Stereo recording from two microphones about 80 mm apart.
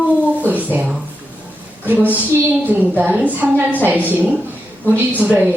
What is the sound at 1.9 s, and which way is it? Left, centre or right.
A woman's voice, right.